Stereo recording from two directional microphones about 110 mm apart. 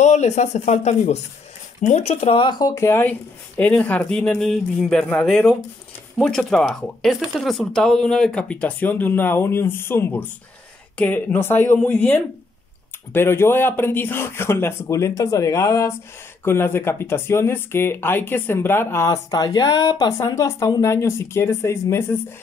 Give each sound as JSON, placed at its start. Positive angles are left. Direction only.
{"t": 0.0, "sound": "speech", "side_deg": 90}
{"t": 2.3, "sound": "speech", "side_deg": 45}
{"t": 2.7, "sound": "speech", "side_deg": 25}